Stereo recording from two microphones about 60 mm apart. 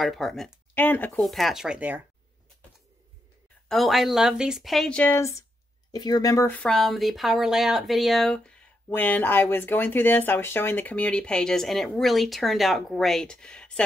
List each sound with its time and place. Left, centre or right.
0.0 s speech: centre
0.7 s speech: left
1.2 s speech: centre
1.8 s speech: right
3.6 s speech: centre
4.8 s speech: centre
5.1 s speech: left
6.1 s speech: left
6.7 s speech: centre
8.8 s speech: left; by 13.8 s centre